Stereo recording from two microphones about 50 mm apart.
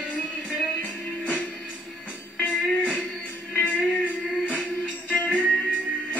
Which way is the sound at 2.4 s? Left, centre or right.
Left.